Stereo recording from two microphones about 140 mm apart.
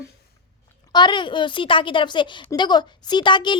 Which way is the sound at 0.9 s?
35° left (ahead or behind).